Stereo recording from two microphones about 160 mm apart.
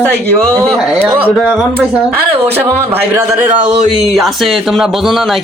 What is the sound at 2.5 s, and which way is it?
Speech, 15° right (ahead or behind).